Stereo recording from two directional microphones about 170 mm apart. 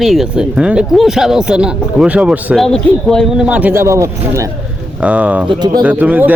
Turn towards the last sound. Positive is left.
turn(degrees=-10)  # may be behind; listen again after turning